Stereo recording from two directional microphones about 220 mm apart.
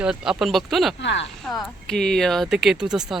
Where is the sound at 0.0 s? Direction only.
5° right (ahead or behind).